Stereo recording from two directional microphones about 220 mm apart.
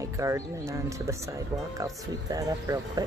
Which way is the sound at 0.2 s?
15° right (ahead or behind).